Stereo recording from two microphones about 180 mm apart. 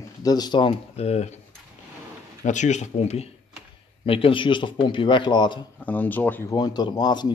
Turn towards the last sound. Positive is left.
turn(degrees=25)  # may be behind; listen again after turning